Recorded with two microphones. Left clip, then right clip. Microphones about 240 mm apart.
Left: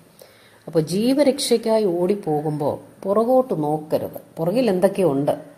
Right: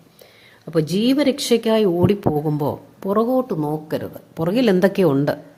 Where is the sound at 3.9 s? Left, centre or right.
Right.